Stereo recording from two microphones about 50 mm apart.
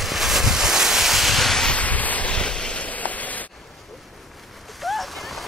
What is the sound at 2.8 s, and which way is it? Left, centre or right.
Rain on surface, left.